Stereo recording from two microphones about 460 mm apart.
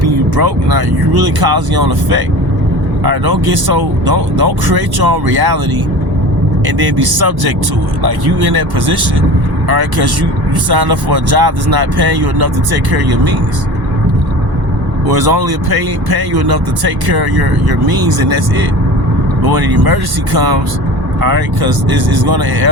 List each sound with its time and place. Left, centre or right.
0.3 s speech: right
6.7 s speech: right
15.0 s speech: right
19.4 s speech: right